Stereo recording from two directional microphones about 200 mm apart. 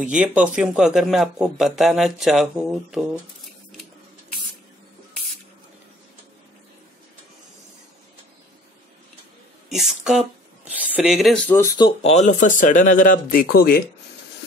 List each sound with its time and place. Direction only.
0.1 s a man's voice: 5° right (ahead or behind)
9.7 s a man's voice: centre (ahead or behind)
11.4 s speech: 10° left (ahead or behind)
11.8 s speech: 30° left (ahead or behind); by 13.8 s 50° left (ahead or behind)